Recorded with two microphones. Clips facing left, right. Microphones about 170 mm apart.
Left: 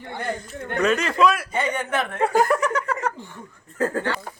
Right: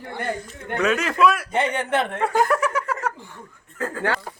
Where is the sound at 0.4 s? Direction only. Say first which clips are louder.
Left 2 dB; centre (ahead or behind).